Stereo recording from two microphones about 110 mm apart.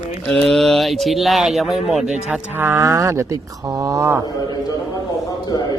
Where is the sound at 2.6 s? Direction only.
25° right (ahead or behind).